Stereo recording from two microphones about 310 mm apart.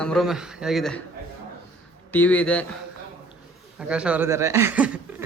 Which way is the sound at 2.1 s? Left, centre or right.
Centre.